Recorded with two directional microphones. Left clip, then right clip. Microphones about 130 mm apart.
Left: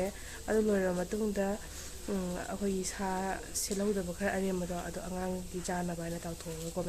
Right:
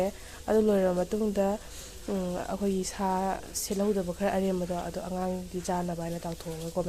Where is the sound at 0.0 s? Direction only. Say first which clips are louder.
Right 6 dB; 25° right (ahead or behind).